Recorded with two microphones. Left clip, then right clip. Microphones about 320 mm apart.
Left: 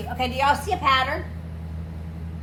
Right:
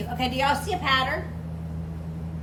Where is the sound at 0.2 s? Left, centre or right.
Centre.